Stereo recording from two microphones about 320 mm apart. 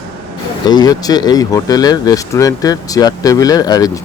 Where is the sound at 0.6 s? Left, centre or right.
Centre.